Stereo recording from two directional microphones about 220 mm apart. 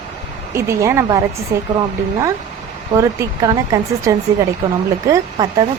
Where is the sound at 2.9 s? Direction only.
15° right (ahead or behind).